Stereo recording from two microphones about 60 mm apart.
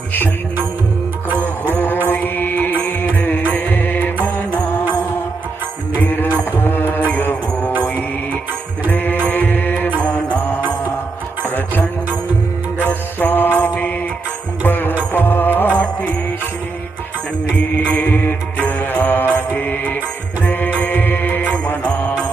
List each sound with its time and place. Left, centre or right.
2.0 s music: left
6.0 s music: left
8.9 s music: left
10.0 s mantra: left
11.4 s music: left
12.9 s mantra: left
14.7 s music: left
15.8 s music: left
17.7 s music: left
18.8 s mantra: left